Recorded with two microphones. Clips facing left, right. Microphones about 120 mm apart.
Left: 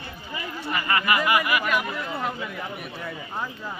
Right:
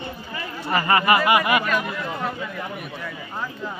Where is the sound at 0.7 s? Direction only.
30° right (ahead or behind).